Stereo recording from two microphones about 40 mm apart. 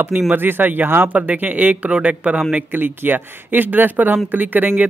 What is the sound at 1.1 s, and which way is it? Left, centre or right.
Speech, right.